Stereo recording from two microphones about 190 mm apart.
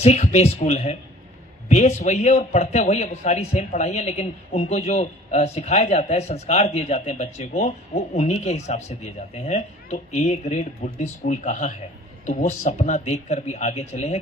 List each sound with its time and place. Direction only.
0.0 s a man's voice: 35° left (ahead or behind)